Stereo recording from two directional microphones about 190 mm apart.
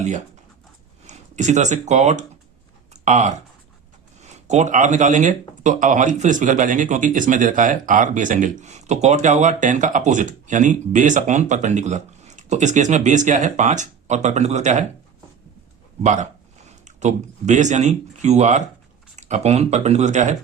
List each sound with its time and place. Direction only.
1.0 s speech: 40° right (ahead or behind)
2.9 s a sound: 40° right (ahead or behind)
4.2 s speech: 40° right (ahead or behind)
16.0 s speech: 40° right (ahead or behind)